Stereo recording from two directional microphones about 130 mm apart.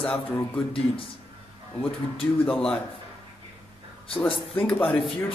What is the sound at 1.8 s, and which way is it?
Speech, 45° left (ahead or behind).